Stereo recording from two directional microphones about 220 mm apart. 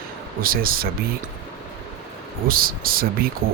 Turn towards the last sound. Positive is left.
turn(degrees=-40)  # may be behind; listen again after turning